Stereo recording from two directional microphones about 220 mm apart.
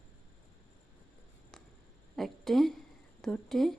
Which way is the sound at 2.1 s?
Centre (ahead or behind).